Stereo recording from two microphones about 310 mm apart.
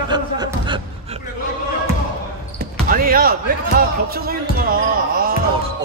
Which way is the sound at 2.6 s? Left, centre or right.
Right.